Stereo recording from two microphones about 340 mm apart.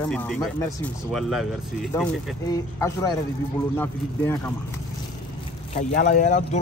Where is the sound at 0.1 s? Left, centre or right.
Centre.